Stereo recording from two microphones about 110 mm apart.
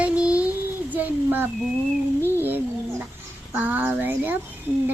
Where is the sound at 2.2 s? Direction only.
20° right (ahead or behind).